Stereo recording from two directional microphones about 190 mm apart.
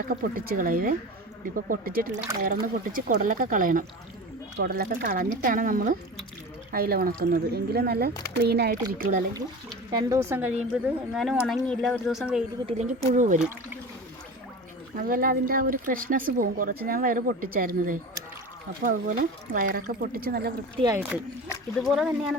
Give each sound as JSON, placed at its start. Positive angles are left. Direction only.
{"t": 0.1, "sound": "speech", "side_deg": -50}
{"t": 9.9, "sound": "speech", "side_deg": -15}
{"t": 12.8, "sound": "speech", "side_deg": -40}
{"t": 14.9, "sound": "speech", "side_deg": -50}
{"t": 20.8, "sound": "speech", "side_deg": -10}
{"t": 21.8, "sound": "speech", "side_deg": 0}